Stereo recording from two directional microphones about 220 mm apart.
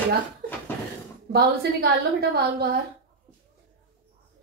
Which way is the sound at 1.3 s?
45° right (ahead or behind).